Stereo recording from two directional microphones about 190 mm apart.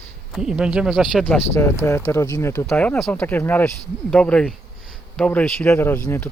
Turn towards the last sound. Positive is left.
turn(degrees=10)  # may be behind; listen again after turning